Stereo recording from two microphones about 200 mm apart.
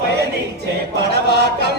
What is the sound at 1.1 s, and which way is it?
Speech, 55° right (ahead or behind).